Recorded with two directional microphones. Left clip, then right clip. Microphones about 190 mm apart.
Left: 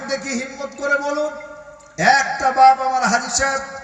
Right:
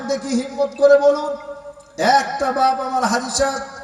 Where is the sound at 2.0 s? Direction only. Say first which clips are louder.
Left 1 dB; 50° right (ahead or behind).